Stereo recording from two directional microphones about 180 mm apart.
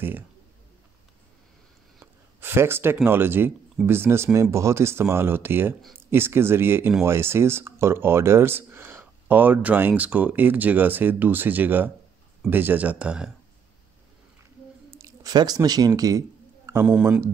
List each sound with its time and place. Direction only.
2.4 s speech: 15° right (ahead or behind)
15.0 s speech: 20° right (ahead or behind)